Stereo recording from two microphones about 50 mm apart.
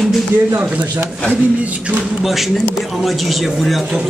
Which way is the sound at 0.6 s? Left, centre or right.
Right.